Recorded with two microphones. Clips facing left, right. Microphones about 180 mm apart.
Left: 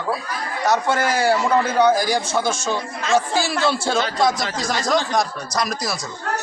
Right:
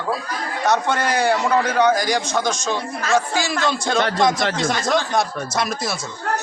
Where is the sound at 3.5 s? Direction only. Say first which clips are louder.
Right 1 dB; 10° left (ahead or behind).